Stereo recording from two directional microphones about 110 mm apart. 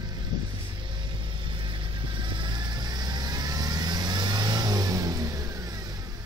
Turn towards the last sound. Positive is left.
turn(degrees=-30)  # may be behind; listen again after turning